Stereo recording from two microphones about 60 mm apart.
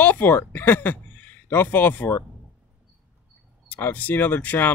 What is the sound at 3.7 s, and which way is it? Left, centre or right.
Speech, left.